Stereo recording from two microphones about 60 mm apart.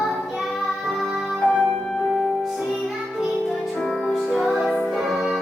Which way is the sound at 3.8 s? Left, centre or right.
Centre.